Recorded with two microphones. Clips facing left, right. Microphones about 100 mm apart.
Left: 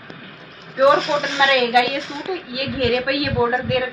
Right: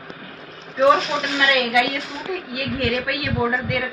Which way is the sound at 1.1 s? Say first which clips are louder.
Left 3 dB; 20° left (ahead or behind).